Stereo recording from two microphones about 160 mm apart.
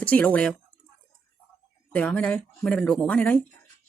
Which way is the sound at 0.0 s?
10° left (ahead or behind).